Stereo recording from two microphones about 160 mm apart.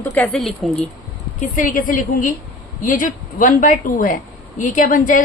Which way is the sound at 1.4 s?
55° left (ahead or behind).